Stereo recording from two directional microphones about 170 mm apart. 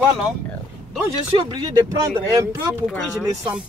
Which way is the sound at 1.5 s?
25° right (ahead or behind).